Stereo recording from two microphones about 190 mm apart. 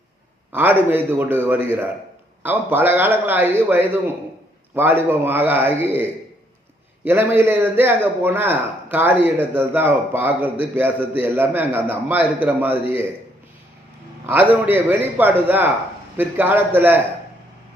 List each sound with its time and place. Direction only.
0.5 s a man's voice: 10° right (ahead or behind)
14.7 s a man's voice: 10° right (ahead or behind)